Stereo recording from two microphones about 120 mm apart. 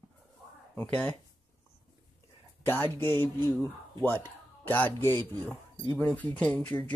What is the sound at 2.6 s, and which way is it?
Speech, 20° left (ahead or behind).